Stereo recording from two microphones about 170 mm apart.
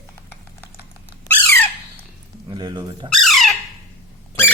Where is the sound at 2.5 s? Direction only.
25° right (ahead or behind).